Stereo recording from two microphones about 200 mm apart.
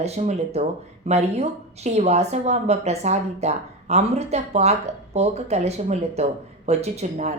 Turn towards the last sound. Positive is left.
turn(degrees=-35)  # may be behind; listen again after turning